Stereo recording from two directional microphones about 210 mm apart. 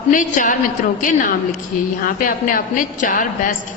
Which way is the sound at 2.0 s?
40° left (ahead or behind).